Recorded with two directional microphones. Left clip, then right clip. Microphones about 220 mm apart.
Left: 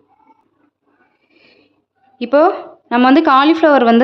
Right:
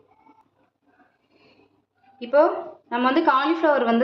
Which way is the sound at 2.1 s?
50° left (ahead or behind).